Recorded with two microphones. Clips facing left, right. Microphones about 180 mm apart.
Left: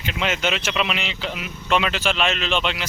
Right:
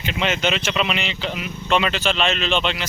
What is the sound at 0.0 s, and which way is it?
Speech, centre (ahead or behind).